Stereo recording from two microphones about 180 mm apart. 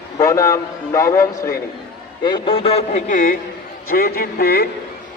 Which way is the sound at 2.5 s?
30° left (ahead or behind).